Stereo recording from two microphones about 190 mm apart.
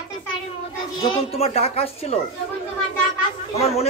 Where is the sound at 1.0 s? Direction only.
30° left (ahead or behind).